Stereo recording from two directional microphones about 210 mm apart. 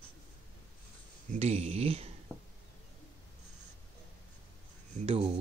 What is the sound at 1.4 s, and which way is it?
Speech, 30° right (ahead or behind).